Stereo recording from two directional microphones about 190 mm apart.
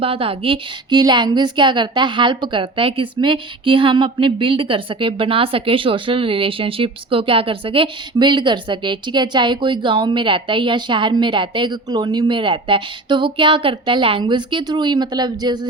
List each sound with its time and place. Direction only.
0.0 s a woman's voice: 30° right (ahead or behind)